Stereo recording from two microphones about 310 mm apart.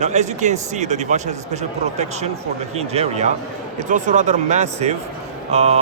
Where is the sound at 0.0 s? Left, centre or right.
Right.